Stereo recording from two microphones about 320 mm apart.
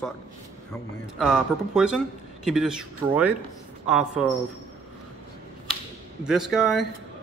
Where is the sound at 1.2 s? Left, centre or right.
Centre.